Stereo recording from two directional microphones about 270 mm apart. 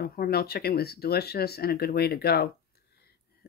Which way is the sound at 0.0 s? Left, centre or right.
Left.